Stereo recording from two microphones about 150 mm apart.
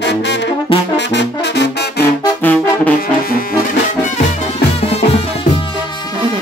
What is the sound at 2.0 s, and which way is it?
Brass instrument, 10° left (ahead or behind).